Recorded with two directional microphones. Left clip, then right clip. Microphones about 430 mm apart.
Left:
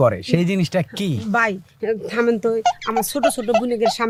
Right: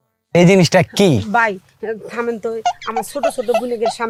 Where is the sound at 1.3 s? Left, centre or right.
Left.